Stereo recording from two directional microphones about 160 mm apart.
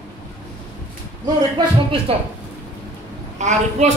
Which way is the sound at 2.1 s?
35° right (ahead or behind).